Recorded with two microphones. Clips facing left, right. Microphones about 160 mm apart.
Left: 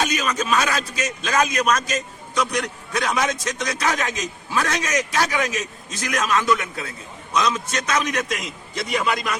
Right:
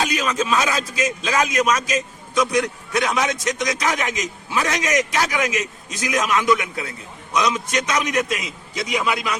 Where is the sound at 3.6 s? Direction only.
15° right (ahead or behind).